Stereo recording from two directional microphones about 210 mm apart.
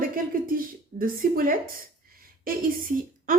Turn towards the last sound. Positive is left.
turn(degrees=-40)  # may be behind; listen again after turning